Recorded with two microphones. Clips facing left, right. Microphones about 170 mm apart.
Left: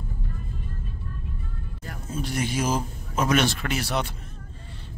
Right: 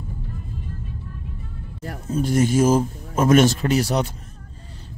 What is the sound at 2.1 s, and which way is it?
A man's voice, 45° right (ahead or behind).